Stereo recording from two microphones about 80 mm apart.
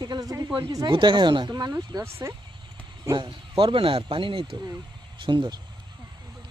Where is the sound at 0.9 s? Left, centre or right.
Right.